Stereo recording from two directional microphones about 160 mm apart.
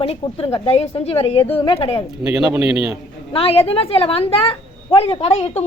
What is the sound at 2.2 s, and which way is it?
Speech, 5° right (ahead or behind).